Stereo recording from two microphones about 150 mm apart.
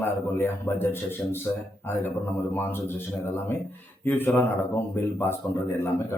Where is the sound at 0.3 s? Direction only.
15° left (ahead or behind).